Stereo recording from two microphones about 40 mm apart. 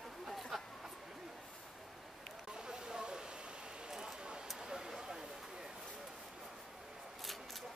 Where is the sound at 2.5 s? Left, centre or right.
Centre.